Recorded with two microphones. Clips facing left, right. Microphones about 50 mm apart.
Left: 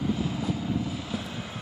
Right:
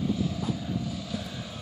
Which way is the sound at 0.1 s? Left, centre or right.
Left.